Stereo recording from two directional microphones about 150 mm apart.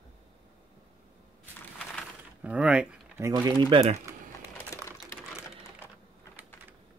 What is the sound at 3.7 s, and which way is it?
Speech, 40° right (ahead or behind).